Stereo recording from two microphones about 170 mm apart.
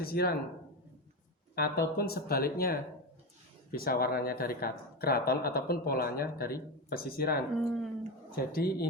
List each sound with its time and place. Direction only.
0.0 s speech: 65° left (ahead or behind)
1.5 s speech: 65° left (ahead or behind)
7.5 s speech: centre (ahead or behind)
8.5 s speech: 65° left (ahead or behind)